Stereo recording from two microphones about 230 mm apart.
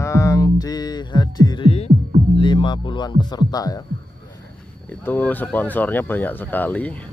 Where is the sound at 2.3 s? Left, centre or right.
Left.